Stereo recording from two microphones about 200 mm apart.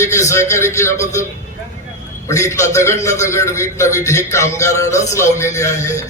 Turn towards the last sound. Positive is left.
turn(degrees=15)  # may be behind; listen again after turning